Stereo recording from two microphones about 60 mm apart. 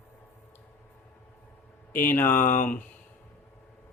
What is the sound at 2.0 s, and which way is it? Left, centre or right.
Speech, left.